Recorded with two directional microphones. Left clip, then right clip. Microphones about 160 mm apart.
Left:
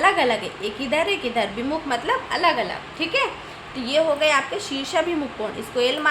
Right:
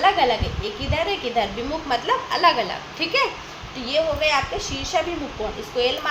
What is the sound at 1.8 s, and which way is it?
A woman's voice, 15° left (ahead or behind).